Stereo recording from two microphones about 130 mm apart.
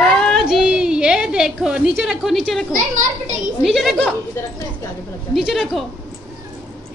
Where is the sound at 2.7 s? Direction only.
90° right.